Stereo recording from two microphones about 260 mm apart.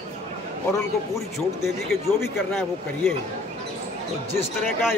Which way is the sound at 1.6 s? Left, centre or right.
Centre.